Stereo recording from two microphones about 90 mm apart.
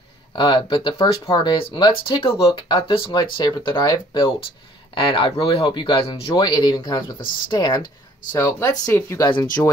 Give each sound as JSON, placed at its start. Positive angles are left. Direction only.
{"t": 0.4, "sound": "speech", "side_deg": 65}
{"t": 1.4, "sound": "speech", "side_deg": 55}
{"t": 2.4, "sound": "speech", "side_deg": 90}
{"t": 3.2, "sound": "speech", "side_deg": 50}
{"t": 4.9, "sound": "speech", "side_deg": 75}
{"t": 6.3, "sound": "speech", "side_deg": 55}
{"t": 8.4, "sound": "speech", "side_deg": 30}